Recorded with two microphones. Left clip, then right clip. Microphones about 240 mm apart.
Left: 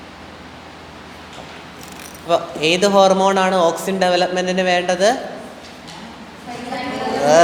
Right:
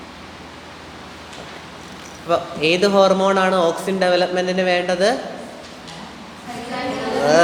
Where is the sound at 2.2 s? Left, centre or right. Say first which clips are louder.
Left 1 dB; centre.